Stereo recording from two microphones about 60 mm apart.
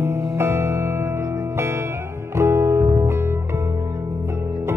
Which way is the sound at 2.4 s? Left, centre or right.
Right.